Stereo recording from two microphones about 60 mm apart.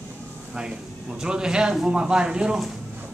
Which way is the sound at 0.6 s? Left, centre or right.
Centre.